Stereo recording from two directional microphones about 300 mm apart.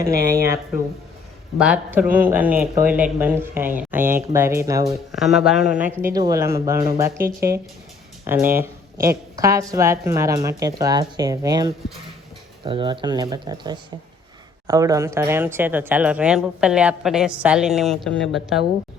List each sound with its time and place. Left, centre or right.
0.0 s speech: right
1.5 s speech: centre